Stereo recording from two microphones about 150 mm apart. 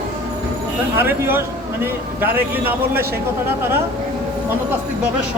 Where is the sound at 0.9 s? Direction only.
15° right (ahead or behind).